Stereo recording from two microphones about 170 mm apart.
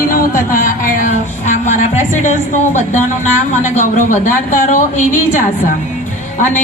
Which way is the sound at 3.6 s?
45° left (ahead or behind).